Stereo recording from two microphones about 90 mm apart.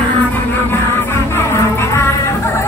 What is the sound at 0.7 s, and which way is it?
Music, 25° left (ahead or behind).